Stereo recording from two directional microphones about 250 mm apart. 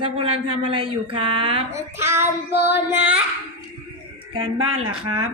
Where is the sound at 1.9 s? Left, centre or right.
Centre.